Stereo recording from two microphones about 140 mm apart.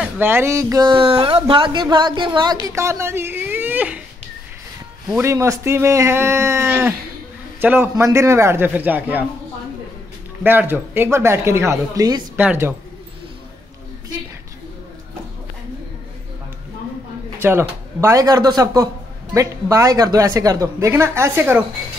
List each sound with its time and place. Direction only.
0.0 s speech: 15° right (ahead or behind); by 2.5 s 35° right (ahead or behind)
2.6 s speech: 20° right (ahead or behind)
5.2 s a man's voice: 20° right (ahead or behind)
10.4 s speech: 15° right (ahead or behind)
12.4 s a man's voice: 15° right (ahead or behind)
17.4 s speech: 15° right (ahead or behind)